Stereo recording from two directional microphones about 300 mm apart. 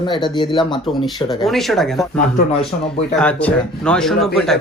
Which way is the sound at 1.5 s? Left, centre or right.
Centre.